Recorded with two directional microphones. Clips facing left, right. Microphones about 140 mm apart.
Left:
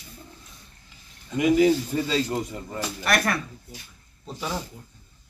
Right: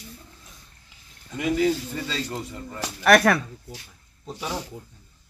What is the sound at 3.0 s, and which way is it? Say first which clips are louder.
Speech: right 8 dB; 65° right (ahead or behind).